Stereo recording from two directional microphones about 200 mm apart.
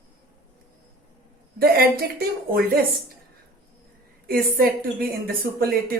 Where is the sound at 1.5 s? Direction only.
50° right (ahead or behind).